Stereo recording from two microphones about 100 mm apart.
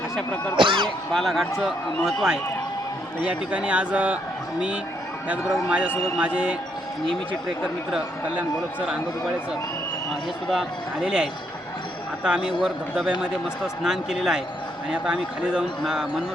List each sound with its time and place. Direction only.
0.5 s a sound: 55° right (ahead or behind)
0.9 s a man's voice: centre (ahead or behind)
6.1 s speech: 10° right (ahead or behind)
7.6 s speech: centre (ahead or behind)
10.5 s speech: 5° right (ahead or behind)